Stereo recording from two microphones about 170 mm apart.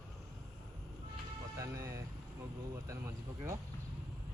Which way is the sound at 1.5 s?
20° right (ahead or behind).